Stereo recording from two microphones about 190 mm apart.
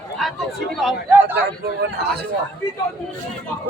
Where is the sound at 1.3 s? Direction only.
60° right (ahead or behind).